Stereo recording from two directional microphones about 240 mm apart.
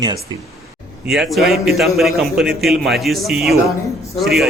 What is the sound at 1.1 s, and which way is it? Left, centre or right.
A man's voice, centre.